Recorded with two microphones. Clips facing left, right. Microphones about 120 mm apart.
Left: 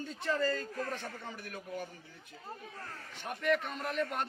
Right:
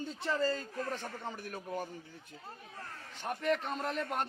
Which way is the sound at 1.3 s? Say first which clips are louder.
Right 2 dB; 45° right (ahead or behind).